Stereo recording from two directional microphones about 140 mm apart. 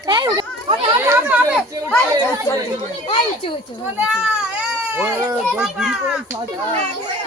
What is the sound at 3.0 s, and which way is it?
Speech, 40° left (ahead or behind).